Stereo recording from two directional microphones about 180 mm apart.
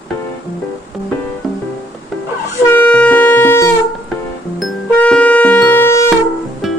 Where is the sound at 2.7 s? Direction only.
10° left (ahead or behind).